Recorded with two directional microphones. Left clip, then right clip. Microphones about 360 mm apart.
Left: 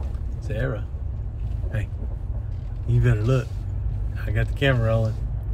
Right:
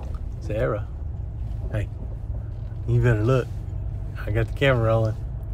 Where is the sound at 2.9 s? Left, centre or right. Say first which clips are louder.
Right 3 dB; centre.